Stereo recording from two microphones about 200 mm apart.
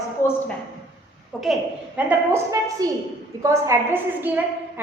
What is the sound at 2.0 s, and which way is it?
A woman's voice, 10° right (ahead or behind).